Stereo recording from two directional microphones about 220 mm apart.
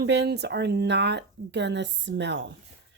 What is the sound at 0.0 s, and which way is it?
Speech, 50° right (ahead or behind).